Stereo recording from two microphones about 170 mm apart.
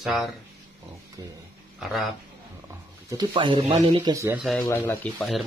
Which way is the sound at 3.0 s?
20° right (ahead or behind).